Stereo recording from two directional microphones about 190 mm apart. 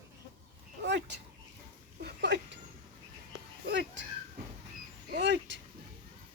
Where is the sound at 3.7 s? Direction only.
70° right (ahead or behind).